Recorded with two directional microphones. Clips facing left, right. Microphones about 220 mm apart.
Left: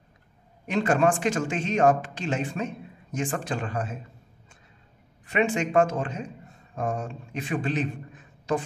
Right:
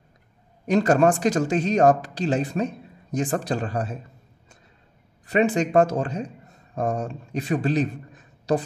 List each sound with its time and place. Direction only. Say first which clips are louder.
0.7 s speech: right 4 dB; 40° right (ahead or behind)
5.2 s a man's voice: right 4 dB; 35° right (ahead or behind)